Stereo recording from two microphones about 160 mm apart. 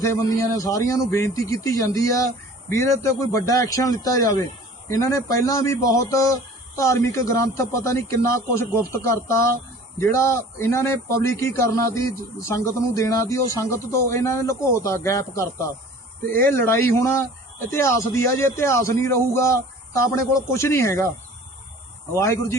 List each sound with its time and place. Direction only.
0.2 s speech: 20° left (ahead or behind)